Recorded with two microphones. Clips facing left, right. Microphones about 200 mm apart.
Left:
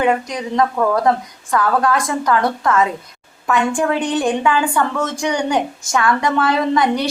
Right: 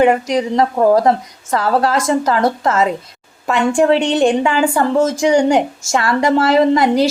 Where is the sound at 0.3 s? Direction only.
25° right (ahead or behind).